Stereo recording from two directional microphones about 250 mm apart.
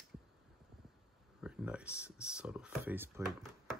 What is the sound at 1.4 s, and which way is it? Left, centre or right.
Speech, centre.